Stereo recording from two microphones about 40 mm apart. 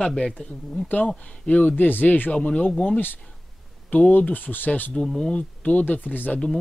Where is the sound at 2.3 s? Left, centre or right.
Left.